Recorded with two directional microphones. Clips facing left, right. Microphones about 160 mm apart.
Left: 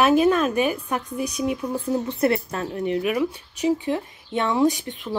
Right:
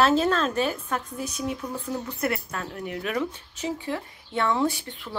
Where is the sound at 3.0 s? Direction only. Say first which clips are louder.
Left 5 dB; 10° left (ahead or behind).